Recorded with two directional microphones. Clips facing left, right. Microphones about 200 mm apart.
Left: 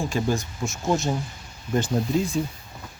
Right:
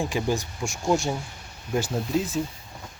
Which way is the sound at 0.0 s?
15° right (ahead or behind).